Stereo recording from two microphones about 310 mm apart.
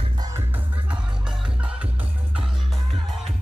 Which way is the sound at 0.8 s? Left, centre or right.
Centre.